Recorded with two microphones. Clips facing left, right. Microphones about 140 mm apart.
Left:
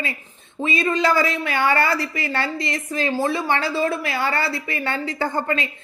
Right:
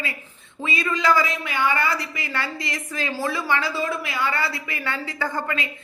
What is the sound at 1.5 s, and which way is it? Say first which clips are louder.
Speech: left 3 dB; 70° left (ahead or behind).